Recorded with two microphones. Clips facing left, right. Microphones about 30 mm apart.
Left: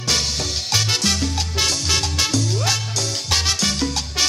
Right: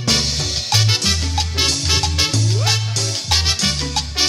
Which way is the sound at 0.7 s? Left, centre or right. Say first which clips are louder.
Right 1 dB; centre.